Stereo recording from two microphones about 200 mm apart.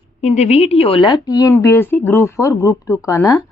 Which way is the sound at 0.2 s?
35° left (ahead or behind).